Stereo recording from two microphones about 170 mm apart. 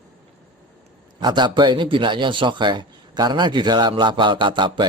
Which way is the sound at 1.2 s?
25° right (ahead or behind).